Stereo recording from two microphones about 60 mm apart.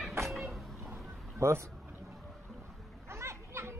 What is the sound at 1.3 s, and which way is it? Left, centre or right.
Speech, right.